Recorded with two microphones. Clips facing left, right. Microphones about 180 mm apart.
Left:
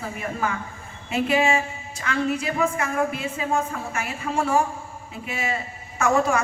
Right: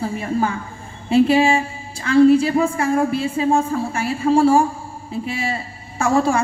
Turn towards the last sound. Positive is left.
turn(degrees=-30)  # may be behind; listen again after turning